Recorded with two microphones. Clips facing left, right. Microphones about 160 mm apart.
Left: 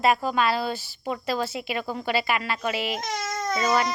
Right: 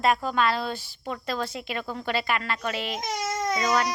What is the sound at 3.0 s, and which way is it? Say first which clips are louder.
Baby cry: right 1 dB; 15° right (ahead or behind).